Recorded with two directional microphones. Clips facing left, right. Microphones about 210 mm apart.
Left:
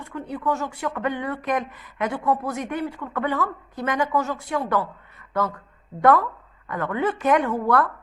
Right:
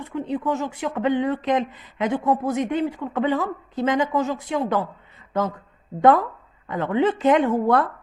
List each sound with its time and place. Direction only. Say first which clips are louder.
0.0 s speech: right 3 dB; 20° right (ahead or behind)
6.0 s speech: right 2 dB; 20° right (ahead or behind)